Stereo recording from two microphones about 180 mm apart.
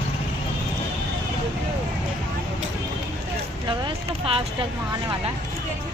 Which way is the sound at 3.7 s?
30° right (ahead or behind).